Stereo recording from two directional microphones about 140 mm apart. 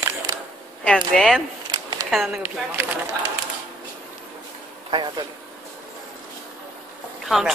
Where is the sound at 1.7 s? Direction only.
25° right (ahead or behind).